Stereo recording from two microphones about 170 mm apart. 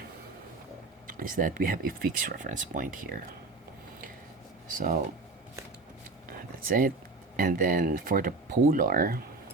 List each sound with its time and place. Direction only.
1.0 s speech: 50° right (ahead or behind)
4.7 s speech: 50° right (ahead or behind)
6.2 s a sound: 60° right (ahead or behind)
7.3 s speech: 55° right (ahead or behind)